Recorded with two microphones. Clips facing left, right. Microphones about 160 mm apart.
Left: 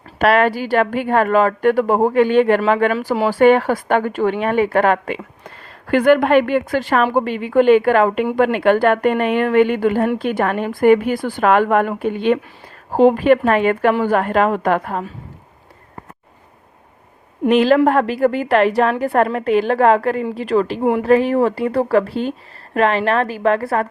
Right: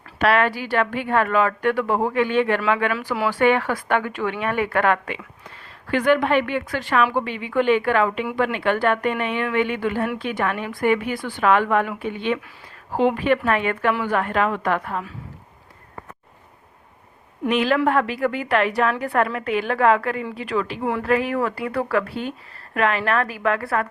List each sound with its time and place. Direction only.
0.2 s a woman's voice: 40° left (ahead or behind)
5.9 s a woman's voice: 45° left (ahead or behind)
17.5 s a woman's voice: 35° left (ahead or behind)